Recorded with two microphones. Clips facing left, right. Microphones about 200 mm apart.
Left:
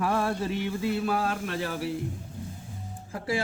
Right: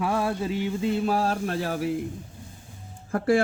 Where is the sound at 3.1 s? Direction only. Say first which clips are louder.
Right 8 dB; 55° right (ahead or behind).